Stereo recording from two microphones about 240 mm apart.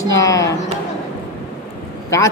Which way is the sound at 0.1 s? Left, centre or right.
Centre.